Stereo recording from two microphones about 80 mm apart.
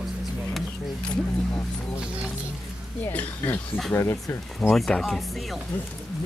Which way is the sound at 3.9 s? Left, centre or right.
Left.